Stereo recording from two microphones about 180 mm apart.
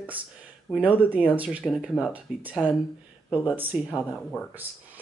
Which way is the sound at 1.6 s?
5° left (ahead or behind).